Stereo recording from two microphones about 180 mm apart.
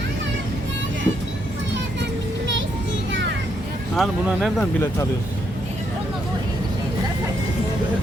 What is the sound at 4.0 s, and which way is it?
Speech, centre (ahead or behind).